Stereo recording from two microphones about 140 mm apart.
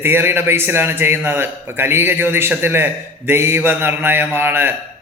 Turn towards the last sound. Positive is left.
turn(degrees=-15)  # may be behind; listen again after turning